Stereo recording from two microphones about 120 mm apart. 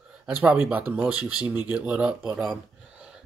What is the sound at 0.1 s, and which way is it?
Speech, 15° right (ahead or behind).